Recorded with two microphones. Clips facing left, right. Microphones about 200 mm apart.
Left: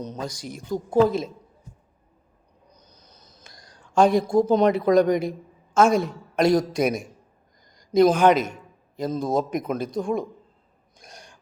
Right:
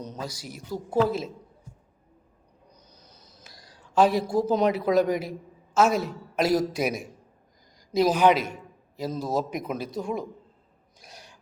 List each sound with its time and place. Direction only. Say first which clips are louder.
0.2 s speech: left 4 dB; 5° right (ahead or behind)
3.0 s speech: even; 10° right (ahead or behind)
7.8 s a sound: left 5 dB; 5° right (ahead or behind)
9.0 s speech: left 4 dB; 5° right (ahead or behind)
9.6 s speech: left 4 dB; 50° left (ahead or behind)
9.8 s speech: left 5 dB; 5° right (ahead or behind)
11.0 s gasp: left 2 dB; 5° right (ahead or behind)